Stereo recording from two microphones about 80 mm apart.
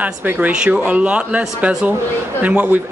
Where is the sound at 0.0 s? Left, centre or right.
Centre.